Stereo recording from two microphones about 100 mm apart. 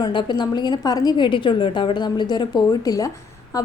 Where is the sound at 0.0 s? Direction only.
50° left (ahead or behind).